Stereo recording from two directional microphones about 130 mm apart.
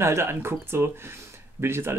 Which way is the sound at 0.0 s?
20° right (ahead or behind).